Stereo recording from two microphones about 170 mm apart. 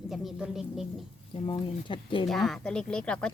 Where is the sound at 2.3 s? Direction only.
Centre (ahead or behind).